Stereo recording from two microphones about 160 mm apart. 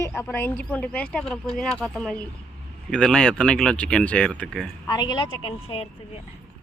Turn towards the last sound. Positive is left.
turn(degrees=35)  # may be behind; listen again after turning